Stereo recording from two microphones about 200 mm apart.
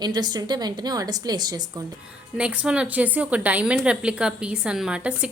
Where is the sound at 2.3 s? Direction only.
5° right (ahead or behind).